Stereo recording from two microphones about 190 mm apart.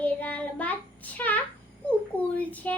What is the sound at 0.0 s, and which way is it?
Child singing, 5° left (ahead or behind).